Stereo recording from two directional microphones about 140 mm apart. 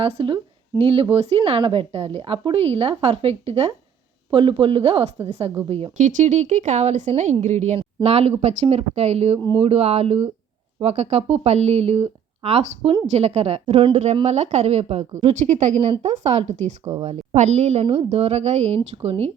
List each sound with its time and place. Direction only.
0.0 s a woman's voice: 40° right (ahead or behind)
6.0 s a woman's voice: 65° right (ahead or behind)
16.8 s speech: 25° right (ahead or behind)
17.1 s a woman's voice: 55° right (ahead or behind)